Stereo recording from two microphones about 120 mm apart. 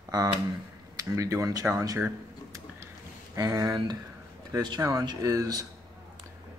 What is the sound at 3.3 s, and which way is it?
Speech, 30° right (ahead or behind).